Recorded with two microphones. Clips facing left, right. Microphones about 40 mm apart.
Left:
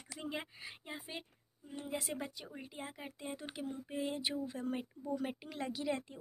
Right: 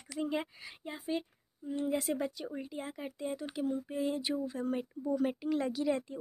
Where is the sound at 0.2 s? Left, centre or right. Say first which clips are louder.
Right 8 dB; centre.